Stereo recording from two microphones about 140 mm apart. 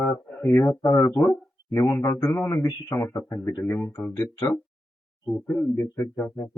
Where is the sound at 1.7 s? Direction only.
20° left (ahead or behind).